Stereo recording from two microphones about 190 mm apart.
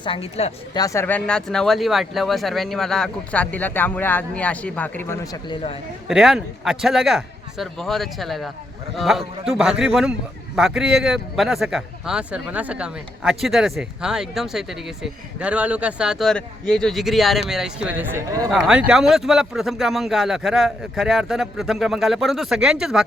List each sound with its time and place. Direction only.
0.0 s speech: 30° left (ahead or behind)
0.7 s speech: 20° left (ahead or behind)
6.1 s a man's voice: centre (ahead or behind)